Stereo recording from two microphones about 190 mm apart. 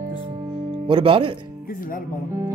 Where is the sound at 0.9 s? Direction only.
30° right (ahead or behind).